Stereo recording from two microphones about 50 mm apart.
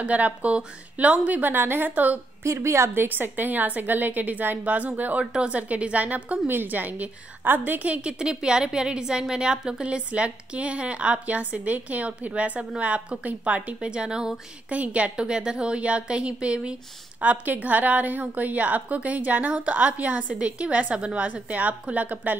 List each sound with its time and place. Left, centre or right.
0.0 s a woman's voice: right
1.4 s a woman's voice: right
2.4 s a woman's voice: right
2.9 s a woman's voice: right
6.5 s a woman's voice: right
13.7 s a woman's voice: centre
14.7 s a woman's voice: right